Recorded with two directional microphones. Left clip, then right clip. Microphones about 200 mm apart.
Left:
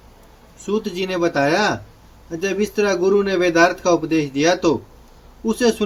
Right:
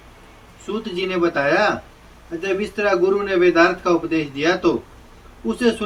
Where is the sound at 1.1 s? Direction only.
65° left (ahead or behind).